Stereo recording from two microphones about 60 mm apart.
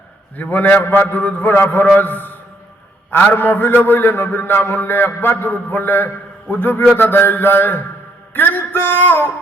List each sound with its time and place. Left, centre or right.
0.3 s a man's voice: left